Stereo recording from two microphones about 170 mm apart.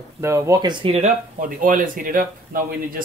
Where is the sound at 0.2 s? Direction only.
15° right (ahead or behind).